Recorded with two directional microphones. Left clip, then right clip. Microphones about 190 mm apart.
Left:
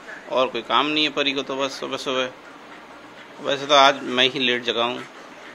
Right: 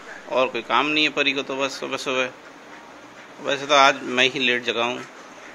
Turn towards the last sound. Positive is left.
turn(degrees=0)  # may be behind; listen again after turning